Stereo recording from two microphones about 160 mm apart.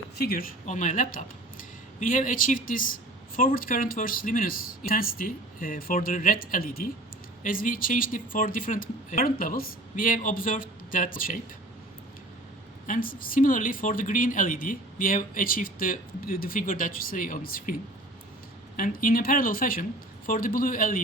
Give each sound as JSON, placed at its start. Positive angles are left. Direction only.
{"t": 0.2, "sound": "speech", "side_deg": 70}
{"t": 0.6, "sound": "speech", "side_deg": 50}
{"t": 12.9, "sound": "speech", "side_deg": 60}
{"t": 18.8, "sound": "speech", "side_deg": 60}